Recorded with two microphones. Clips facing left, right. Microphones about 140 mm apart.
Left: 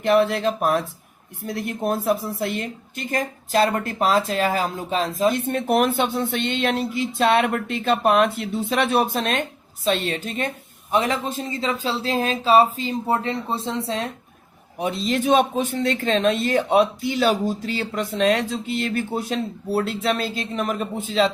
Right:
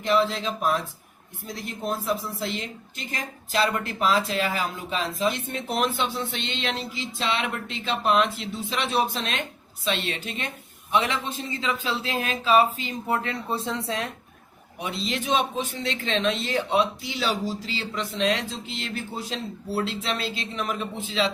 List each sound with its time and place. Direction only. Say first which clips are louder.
0.0 s a woman's voice: left 5 dB; 65° left (ahead or behind); by 14.1 s 30° left (ahead or behind)
14.8 s a woman's voice: left 7 dB; 45° left (ahead or behind)